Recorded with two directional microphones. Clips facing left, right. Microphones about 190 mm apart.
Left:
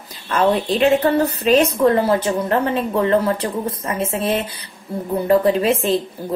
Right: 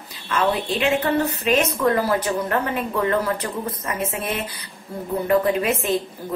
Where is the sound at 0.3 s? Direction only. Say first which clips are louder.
Left 5 dB; 40° left (ahead or behind).